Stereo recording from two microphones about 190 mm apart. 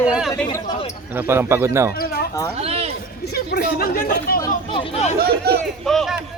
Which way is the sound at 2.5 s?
35° right (ahead or behind).